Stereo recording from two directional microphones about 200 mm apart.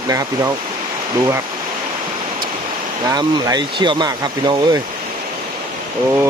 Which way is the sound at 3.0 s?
20° right (ahead or behind).